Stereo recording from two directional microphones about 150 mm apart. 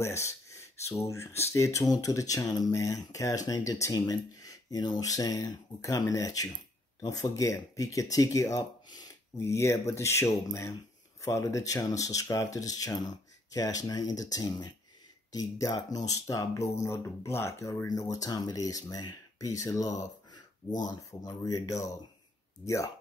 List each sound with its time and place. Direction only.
0.0 s speech: 20° left (ahead or behind)